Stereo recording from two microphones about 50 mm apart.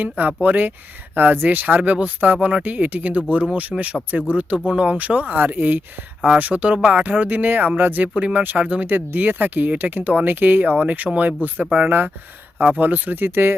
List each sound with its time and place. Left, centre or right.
0.0 s speech: right
5.4 s speech: right
6.3 s speech: right
9.0 s speech: right
10.2 s speech: right